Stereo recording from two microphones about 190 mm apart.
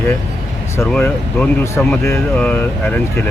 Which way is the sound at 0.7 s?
10° left (ahead or behind).